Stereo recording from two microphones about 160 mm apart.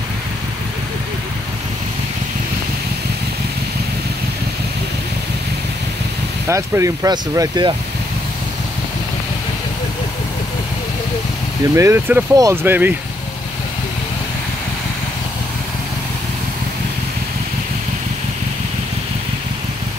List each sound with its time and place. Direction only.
6.5 s speech: 20° right (ahead or behind)
11.7 s speech: 15° right (ahead or behind)